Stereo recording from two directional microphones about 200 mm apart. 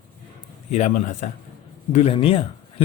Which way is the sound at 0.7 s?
35° left (ahead or behind).